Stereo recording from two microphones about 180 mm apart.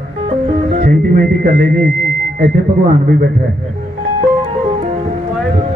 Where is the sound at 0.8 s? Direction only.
50° right (ahead or behind).